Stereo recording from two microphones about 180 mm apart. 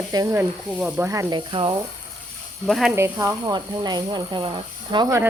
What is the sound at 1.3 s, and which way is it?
Speech, 25° right (ahead or behind).